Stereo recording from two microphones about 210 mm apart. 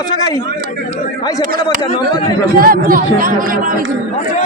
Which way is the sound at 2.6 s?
45° right (ahead or behind).